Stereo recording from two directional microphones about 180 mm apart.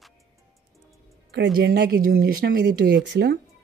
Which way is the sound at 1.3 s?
65° right (ahead or behind).